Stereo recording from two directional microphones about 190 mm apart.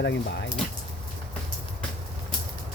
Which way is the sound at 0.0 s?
65° left (ahead or behind).